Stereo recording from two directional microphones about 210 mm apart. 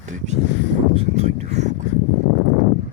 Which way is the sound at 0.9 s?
30° right (ahead or behind).